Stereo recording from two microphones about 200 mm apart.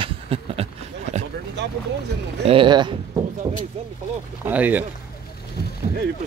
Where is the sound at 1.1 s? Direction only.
35° right (ahead or behind).